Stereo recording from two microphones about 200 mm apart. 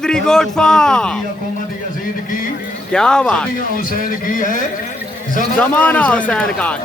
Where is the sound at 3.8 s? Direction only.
40° left (ahead or behind).